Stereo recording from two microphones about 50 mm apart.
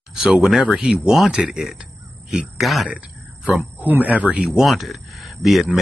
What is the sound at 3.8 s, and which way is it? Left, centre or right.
Speech, right.